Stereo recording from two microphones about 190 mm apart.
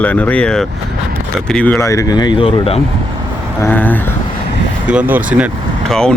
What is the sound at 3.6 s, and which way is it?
Speech, 10° left (ahead or behind).